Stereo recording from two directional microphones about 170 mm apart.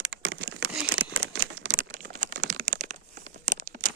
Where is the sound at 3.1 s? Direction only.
50° right (ahead or behind).